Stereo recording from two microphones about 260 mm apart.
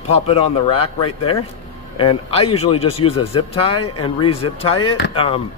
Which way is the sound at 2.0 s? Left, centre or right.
Left.